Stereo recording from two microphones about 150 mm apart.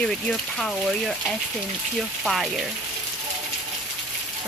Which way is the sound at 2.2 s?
Centre (ahead or behind).